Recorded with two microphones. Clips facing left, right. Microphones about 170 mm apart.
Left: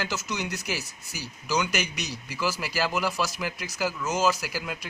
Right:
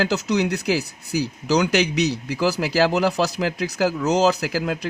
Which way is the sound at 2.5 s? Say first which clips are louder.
Right 9 dB; 75° right (ahead or behind).